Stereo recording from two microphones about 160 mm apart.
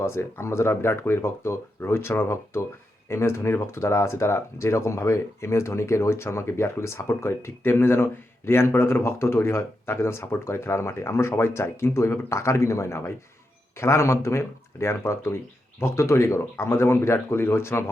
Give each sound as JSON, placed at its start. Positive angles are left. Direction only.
{"t": 0.0, "sound": "speech", "side_deg": 15}